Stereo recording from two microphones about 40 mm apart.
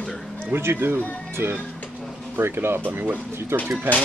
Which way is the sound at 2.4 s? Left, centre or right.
Right.